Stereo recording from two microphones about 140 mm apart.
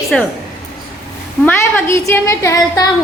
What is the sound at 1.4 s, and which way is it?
A woman's voice, 20° left (ahead or behind).